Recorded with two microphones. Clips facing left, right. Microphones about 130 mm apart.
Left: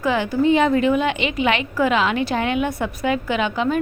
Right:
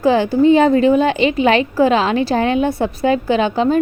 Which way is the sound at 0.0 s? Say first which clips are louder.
Right 6 dB; 30° right (ahead or behind).